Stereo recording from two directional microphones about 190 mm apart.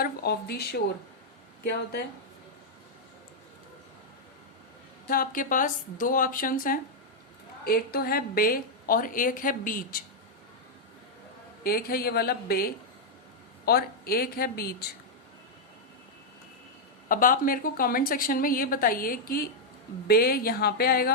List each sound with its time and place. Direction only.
0.0 s speech: 55° left (ahead or behind)
5.0 s a woman's voice: 45° left (ahead or behind)
11.6 s a woman's voice: 50° left (ahead or behind)
17.1 s a woman's voice: 45° left (ahead or behind)